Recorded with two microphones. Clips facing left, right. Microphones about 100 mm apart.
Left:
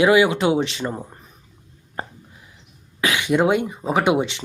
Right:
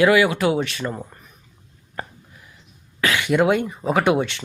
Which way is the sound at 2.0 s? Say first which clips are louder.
Left 1 dB; 25° left (ahead or behind).